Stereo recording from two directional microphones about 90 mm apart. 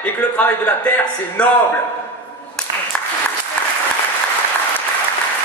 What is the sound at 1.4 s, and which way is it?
Speech, 10° left (ahead or behind).